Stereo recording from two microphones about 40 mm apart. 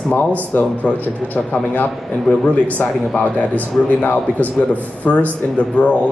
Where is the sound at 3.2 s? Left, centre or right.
Left.